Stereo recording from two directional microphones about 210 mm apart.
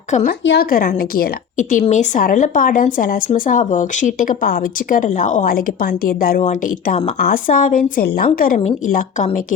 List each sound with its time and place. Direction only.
0.1 s a woman's voice: 35° left (ahead or behind)
0.4 s a woman's voice: 50° left (ahead or behind)